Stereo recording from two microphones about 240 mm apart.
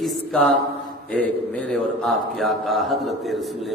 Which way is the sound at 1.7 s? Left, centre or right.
Centre.